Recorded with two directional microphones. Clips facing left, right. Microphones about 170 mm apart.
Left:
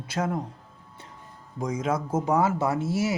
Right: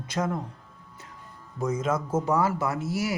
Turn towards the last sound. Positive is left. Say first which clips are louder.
# left 3 dB
turn(degrees=25)  # may be behind; listen again after turning